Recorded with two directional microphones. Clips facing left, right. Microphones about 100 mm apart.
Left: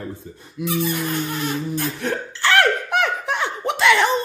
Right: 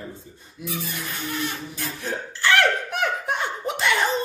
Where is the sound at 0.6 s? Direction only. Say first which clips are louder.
Left 9 dB; 70° left (ahead or behind).